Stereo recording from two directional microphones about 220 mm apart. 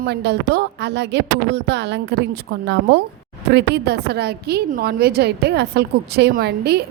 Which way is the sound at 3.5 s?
50° right (ahead or behind).